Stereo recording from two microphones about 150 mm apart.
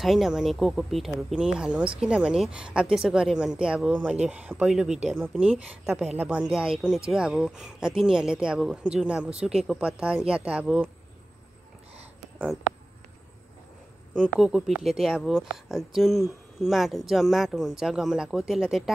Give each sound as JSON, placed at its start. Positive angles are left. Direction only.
{"t": 0.0, "sound": "speech", "side_deg": 0}
{"t": 14.1, "sound": "speech", "side_deg": -5}